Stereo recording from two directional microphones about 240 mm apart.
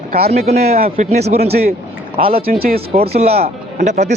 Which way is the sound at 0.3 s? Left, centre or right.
Right.